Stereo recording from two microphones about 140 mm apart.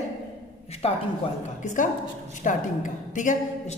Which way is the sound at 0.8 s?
45° left (ahead or behind).